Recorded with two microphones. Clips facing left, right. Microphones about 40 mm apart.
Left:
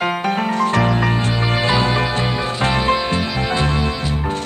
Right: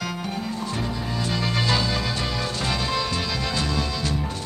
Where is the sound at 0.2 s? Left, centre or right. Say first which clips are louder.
Left 11 dB; left.